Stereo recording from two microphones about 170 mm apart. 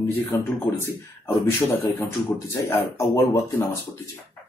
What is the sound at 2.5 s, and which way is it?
Speech, 15° left (ahead or behind).